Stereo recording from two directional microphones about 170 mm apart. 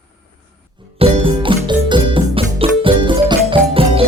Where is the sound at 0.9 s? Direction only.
30° right (ahead or behind).